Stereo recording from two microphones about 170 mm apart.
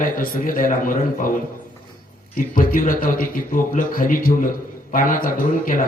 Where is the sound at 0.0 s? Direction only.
55° left (ahead or behind).